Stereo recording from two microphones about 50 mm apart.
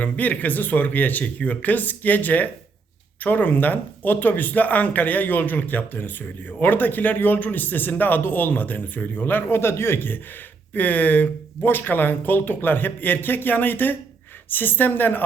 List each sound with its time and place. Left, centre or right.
0.0 s a man's voice: left
10.8 s a man's voice: left